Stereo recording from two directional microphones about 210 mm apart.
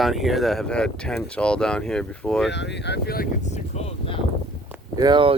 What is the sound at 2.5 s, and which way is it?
Speech, 55° left (ahead or behind).